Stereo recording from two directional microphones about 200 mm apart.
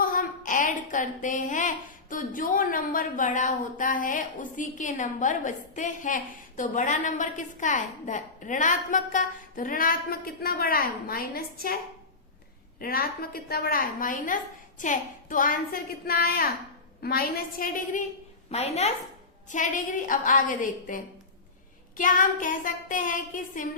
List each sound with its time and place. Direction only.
0.0 s a woman's voice: 45° left (ahead or behind)
12.8 s a woman's voice: 45° left (ahead or behind)
18.5 s a woman's voice: 30° left (ahead or behind)